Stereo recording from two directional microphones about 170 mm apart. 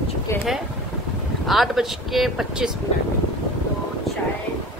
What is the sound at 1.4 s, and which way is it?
Speech, centre (ahead or behind).